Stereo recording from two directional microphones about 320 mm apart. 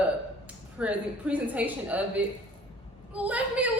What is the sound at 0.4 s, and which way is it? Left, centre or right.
A woman's voice, centre.